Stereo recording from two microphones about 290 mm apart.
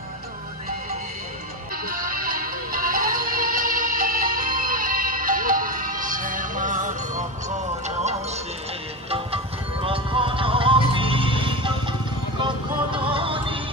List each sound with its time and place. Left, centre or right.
1.9 s music: right
9.1 s music: centre